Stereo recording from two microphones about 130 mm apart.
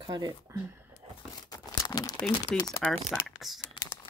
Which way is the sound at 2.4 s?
30° left (ahead or behind).